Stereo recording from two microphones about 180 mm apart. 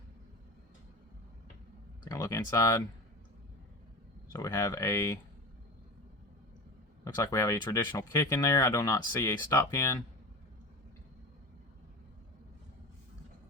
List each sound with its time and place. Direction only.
2.0 s speech: 20° left (ahead or behind)
4.3 s speech: 15° left (ahead or behind)
7.0 s speech: 15° left (ahead or behind)